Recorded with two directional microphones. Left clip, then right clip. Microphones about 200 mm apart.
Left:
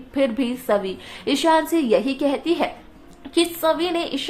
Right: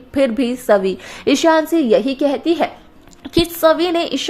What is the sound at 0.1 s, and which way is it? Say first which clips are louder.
A woman's voice: right 5 dB; 20° right (ahead or behind).